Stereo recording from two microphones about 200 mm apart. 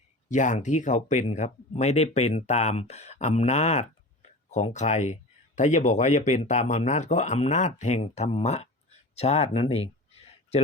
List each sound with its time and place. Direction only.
0.3 s speech: 40° left (ahead or behind)